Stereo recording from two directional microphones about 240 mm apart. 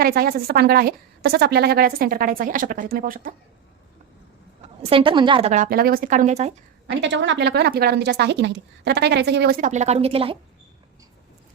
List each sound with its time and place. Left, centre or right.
0.0 s a woman's voice: right
4.9 s a woman's voice: right
6.8 s speech: right